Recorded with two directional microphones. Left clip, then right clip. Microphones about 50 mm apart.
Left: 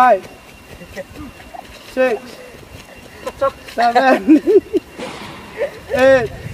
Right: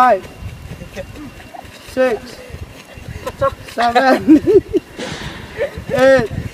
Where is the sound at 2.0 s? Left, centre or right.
Right.